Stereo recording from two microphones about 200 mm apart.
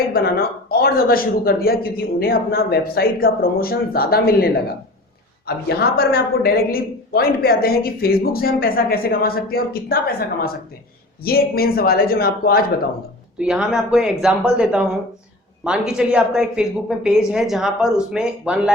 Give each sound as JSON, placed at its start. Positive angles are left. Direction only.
{"t": 0.1, "sound": "a woman's voice", "side_deg": 50}
{"t": 5.6, "sound": "a woman's voice", "side_deg": 50}
{"t": 13.4, "sound": "speech", "side_deg": -5}